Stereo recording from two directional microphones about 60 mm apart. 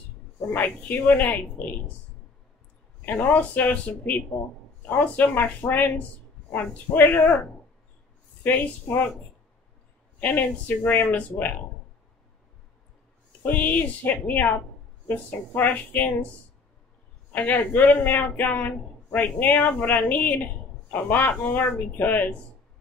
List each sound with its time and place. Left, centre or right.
0.7 s speech: left
3.1 s speech: left
8.5 s speech: left
10.2 s speech: left
13.5 s speech: left
17.3 s speech: left